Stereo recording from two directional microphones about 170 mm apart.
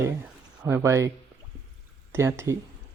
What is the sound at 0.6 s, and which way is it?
Speech, 15° right (ahead or behind).